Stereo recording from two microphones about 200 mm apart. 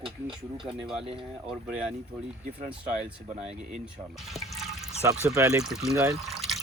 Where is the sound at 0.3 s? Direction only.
25° right (ahead or behind).